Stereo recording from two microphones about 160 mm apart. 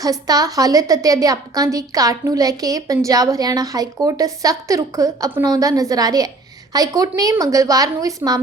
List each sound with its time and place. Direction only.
0.0 s a woman's voice: 25° right (ahead or behind)